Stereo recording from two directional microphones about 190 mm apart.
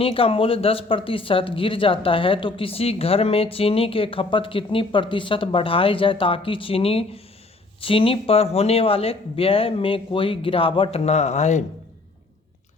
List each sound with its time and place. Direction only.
0.0 s speech: 30° left (ahead or behind)